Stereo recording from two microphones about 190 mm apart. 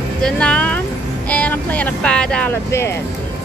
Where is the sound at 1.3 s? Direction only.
10° left (ahead or behind).